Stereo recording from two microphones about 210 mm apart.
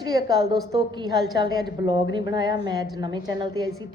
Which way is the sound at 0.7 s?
20° right (ahead or behind).